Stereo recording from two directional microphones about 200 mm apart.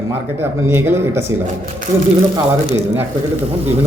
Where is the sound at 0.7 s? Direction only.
10° right (ahead or behind).